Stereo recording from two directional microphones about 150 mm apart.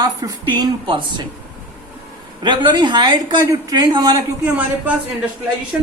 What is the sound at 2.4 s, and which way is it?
Speech, 30° right (ahead or behind).